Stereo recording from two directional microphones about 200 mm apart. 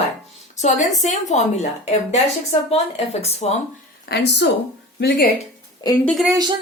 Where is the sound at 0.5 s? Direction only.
35° left (ahead or behind).